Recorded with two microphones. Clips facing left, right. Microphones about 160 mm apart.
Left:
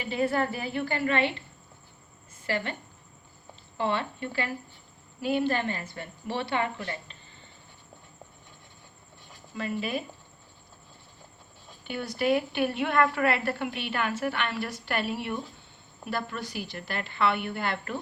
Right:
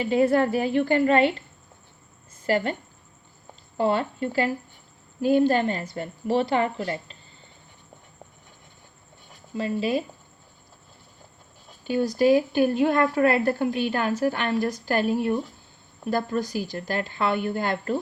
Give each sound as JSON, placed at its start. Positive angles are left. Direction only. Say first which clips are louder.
{"t": 0.0, "sound": "a woman's voice", "louder": "right 7 dB", "side_deg": -40}
{"t": 2.5, "sound": "a woman's voice", "louder": "right 7 dB", "side_deg": -40}
{"t": 3.8, "sound": "a woman's voice", "louder": "right 6 dB", "side_deg": -40}
{"t": 9.6, "sound": "a woman's voice", "louder": "right 6 dB", "side_deg": -30}
{"t": 11.9, "sound": "a woman's voice", "louder": "right 7 dB", "side_deg": -35}